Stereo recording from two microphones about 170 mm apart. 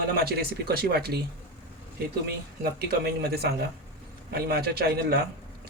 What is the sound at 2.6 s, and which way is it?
Speech, 70° right (ahead or behind).